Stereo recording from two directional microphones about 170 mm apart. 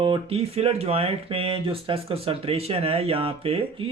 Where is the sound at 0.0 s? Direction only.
35° right (ahead or behind).